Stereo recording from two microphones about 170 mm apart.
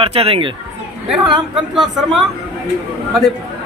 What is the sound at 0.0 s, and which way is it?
Speech, 35° right (ahead or behind).